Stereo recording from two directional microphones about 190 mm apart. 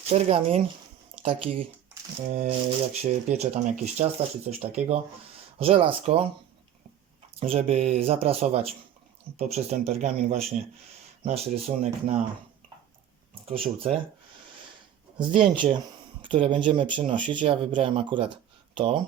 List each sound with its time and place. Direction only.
0.1 s speech: 35° right (ahead or behind)
7.3 s speech: 30° right (ahead or behind)
13.3 s speech: 30° right (ahead or behind)
15.3 s speech: 25° right (ahead or behind)